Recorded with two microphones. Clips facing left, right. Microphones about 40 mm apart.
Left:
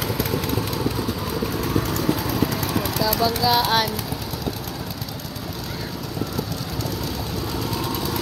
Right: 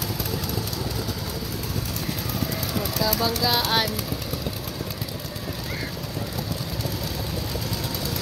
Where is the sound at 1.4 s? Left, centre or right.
Left.